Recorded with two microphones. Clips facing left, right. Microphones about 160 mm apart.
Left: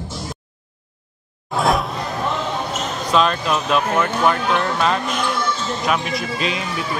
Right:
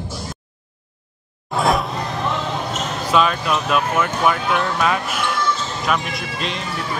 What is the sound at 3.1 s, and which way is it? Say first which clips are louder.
Speech: even; 5° right (ahead or behind).